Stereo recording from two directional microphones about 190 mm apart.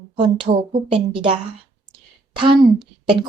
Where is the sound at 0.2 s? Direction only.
25° right (ahead or behind).